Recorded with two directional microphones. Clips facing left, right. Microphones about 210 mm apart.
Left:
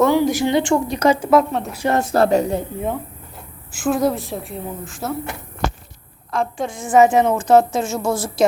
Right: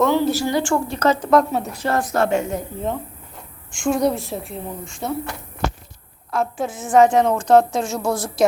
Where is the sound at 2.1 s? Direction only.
35° left (ahead or behind).